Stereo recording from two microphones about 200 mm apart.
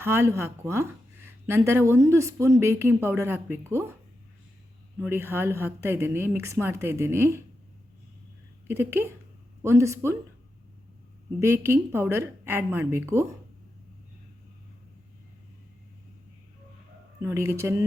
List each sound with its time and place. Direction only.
0.0 s speech: 10° right (ahead or behind)
5.0 s speech: 10° right (ahead or behind)
8.6 s speech: 10° right (ahead or behind)
11.3 s speech: 15° right (ahead or behind)
17.2 s speech: 15° right (ahead or behind)